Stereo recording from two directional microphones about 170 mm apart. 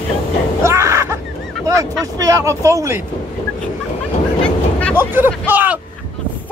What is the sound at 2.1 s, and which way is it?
Speech, 20° right (ahead or behind).